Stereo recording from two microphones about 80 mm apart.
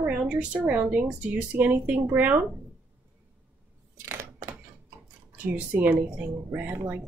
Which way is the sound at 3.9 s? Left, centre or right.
Right.